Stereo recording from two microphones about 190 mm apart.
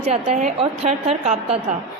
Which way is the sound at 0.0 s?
35° right (ahead or behind).